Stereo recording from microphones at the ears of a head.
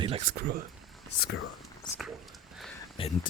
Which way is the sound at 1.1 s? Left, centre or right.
Left.